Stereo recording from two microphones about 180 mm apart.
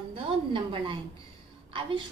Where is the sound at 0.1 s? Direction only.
30° right (ahead or behind).